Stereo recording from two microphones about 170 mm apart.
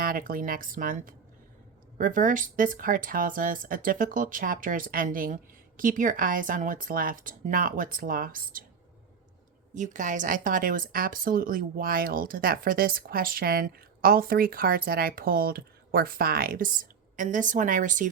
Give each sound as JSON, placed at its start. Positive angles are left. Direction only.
{"t": 0.0, "sound": "a woman's voice", "side_deg": -55}
{"t": 9.7, "sound": "a woman's voice", "side_deg": -45}